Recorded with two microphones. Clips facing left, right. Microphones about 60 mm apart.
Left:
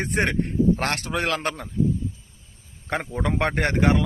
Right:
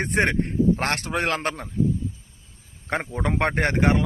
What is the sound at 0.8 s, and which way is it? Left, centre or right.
Speech, right.